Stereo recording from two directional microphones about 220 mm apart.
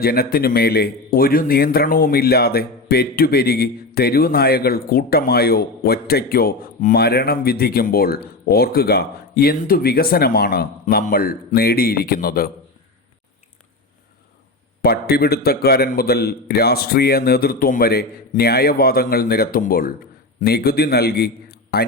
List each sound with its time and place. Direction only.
0.0 s a man's voice: 45° left (ahead or behind)
14.8 s a man's voice: 45° left (ahead or behind)